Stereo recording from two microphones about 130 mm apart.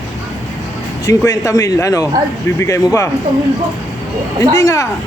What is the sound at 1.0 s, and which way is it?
Speech, 25° left (ahead or behind).